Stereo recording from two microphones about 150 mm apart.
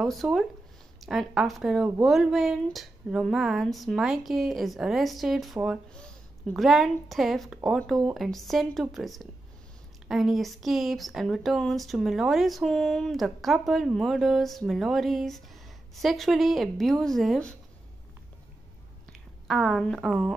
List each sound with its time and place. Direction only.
0.0 s speech: centre (ahead or behind)
19.4 s speech: centre (ahead or behind)